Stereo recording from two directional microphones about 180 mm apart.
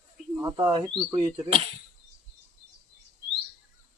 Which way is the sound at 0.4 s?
20° right (ahead or behind).